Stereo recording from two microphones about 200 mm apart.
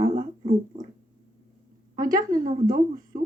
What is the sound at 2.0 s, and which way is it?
Speech, 45° right (ahead or behind).